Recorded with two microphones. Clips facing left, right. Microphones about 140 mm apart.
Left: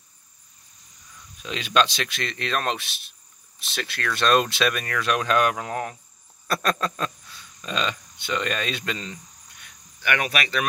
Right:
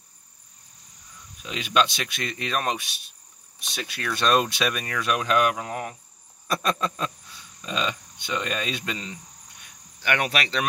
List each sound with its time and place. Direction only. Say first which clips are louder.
1.4 s speech: left 1 dB; 10° right (ahead or behind)
10.0 s speech: even; 35° right (ahead or behind)